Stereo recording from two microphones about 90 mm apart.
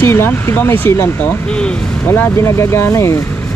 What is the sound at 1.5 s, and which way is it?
Speech, 10° left (ahead or behind).